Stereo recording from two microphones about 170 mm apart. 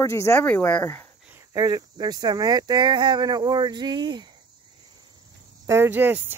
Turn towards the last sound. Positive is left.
turn(degrees=-10)  # may be behind; listen again after turning